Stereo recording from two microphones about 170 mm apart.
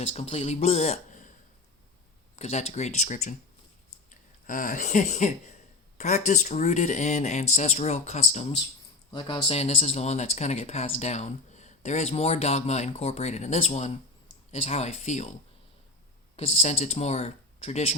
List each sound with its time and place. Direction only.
0.0 s speech: 35° left (ahead or behind)
2.3 s speech: 40° left (ahead or behind)
9.1 s speech: 30° left (ahead or behind)